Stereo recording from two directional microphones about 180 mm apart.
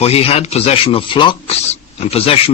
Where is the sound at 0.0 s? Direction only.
35° left (ahead or behind).